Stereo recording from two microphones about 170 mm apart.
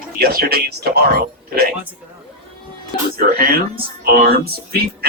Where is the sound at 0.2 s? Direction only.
65° right (ahead or behind).